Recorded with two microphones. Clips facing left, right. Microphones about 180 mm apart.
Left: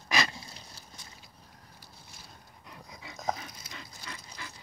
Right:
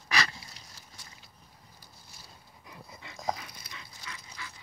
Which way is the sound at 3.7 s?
40° left (ahead or behind).